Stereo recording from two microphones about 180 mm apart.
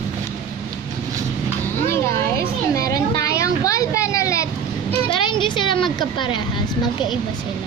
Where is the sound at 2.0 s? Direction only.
15° left (ahead or behind).